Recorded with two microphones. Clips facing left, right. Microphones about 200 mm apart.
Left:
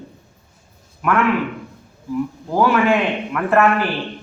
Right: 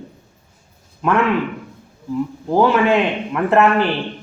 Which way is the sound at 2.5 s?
20° right (ahead or behind).